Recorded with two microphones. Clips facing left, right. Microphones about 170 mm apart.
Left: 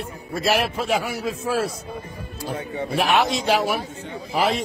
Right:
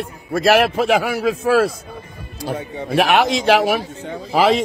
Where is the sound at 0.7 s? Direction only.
55° right (ahead or behind).